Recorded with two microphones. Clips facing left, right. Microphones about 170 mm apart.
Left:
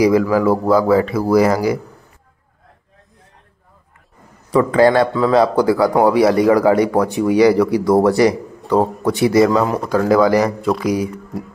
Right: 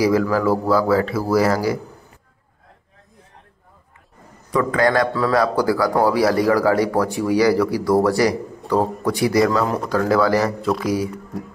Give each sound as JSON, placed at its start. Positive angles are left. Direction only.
{"t": 0.0, "sound": "speech", "side_deg": 15}
{"t": 4.5, "sound": "speech", "side_deg": 30}